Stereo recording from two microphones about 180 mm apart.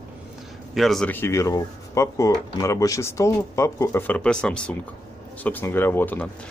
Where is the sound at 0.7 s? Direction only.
Centre (ahead or behind).